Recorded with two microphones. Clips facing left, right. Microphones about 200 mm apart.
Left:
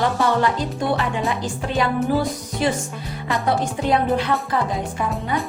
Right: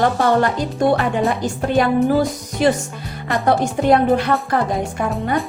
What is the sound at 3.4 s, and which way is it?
Speech, 55° right (ahead or behind).